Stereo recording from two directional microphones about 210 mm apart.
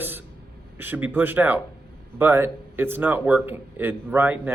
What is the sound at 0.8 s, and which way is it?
Speech, 10° right (ahead or behind).